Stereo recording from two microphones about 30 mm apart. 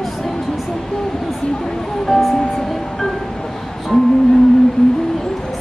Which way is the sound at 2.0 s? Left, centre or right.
Centre.